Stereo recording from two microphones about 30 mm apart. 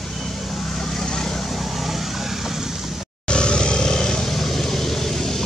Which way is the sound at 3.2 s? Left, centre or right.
Left.